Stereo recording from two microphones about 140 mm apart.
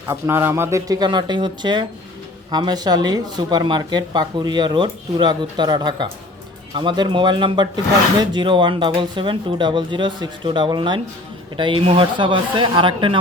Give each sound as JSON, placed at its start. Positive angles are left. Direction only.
{"t": 0.1, "sound": "speech", "side_deg": -20}